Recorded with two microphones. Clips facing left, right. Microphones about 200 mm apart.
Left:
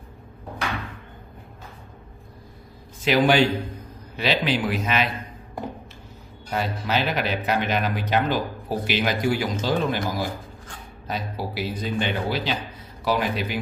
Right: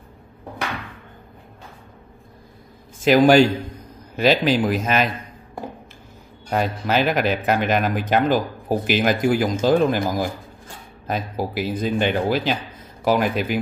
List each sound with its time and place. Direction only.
3.0 s speech: 45° right (ahead or behind)
6.5 s speech: 50° right (ahead or behind)